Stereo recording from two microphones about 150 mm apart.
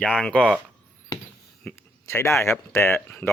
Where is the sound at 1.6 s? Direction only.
15° left (ahead or behind).